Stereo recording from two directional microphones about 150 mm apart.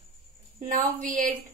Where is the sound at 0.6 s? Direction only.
60° right (ahead or behind).